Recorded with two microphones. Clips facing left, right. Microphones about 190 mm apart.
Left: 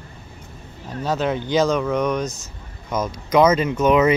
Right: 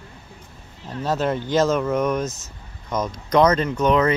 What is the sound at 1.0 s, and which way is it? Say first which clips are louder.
Speech: even; centre (ahead or behind).